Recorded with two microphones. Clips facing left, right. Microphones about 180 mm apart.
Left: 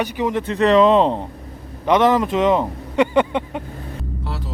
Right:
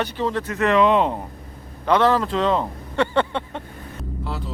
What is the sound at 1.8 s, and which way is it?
Speech, 20° left (ahead or behind).